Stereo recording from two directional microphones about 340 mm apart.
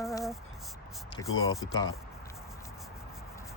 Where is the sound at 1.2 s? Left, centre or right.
Left.